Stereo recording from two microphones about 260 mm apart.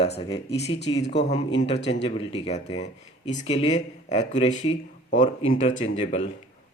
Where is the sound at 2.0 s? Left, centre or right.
Centre.